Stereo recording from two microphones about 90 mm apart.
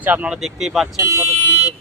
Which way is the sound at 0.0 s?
15° right (ahead or behind).